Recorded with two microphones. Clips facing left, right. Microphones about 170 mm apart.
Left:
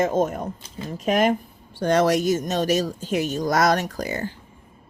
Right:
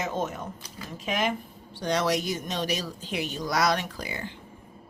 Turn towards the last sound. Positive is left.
turn(degrees=45)  # may be behind; listen again after turning